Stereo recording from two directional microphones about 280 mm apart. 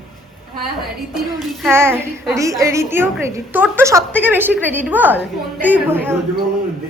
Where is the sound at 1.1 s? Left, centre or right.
Centre.